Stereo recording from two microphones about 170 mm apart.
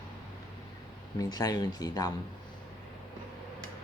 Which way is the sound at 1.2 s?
20° left (ahead or behind).